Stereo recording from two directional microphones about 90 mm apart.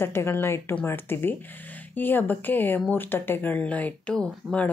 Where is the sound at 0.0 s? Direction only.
25° left (ahead or behind).